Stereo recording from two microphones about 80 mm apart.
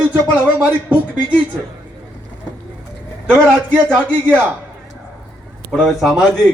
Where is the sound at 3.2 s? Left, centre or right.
Right.